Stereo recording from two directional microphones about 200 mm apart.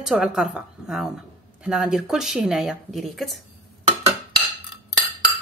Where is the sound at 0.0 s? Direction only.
5° right (ahead or behind).